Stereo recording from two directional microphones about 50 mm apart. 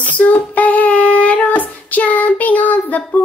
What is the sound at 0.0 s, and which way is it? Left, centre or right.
Child singing, left.